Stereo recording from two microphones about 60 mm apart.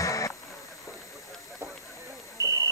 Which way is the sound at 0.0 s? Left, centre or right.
Left.